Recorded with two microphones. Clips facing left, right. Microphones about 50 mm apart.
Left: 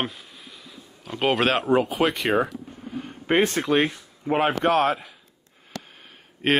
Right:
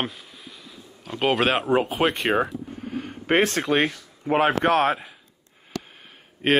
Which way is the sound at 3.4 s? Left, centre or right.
Centre.